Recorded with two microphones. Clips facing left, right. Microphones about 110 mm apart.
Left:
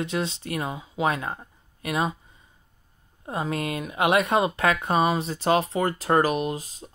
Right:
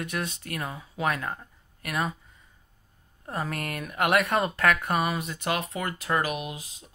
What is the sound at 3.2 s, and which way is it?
Speech, 20° left (ahead or behind).